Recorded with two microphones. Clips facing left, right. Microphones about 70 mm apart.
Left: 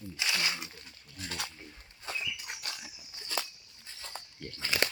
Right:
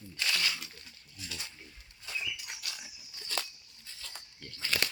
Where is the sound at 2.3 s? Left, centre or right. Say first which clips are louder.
Left 2 dB; left.